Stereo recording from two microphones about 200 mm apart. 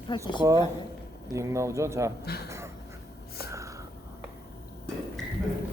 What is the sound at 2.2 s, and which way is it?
Speech, 50° left (ahead or behind).